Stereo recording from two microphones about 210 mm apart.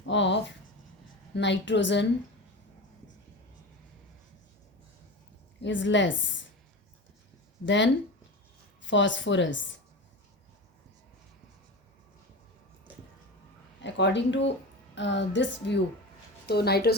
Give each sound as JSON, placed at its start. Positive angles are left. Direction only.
{"t": 0.0, "sound": "a sound", "side_deg": 60}
{"t": 1.3, "sound": "a woman's voice", "side_deg": 55}
{"t": 5.6, "sound": "a woman's voice", "side_deg": 60}
{"t": 7.6, "sound": "a woman's voice", "side_deg": 60}
{"t": 13.8, "sound": "a woman's voice", "side_deg": 55}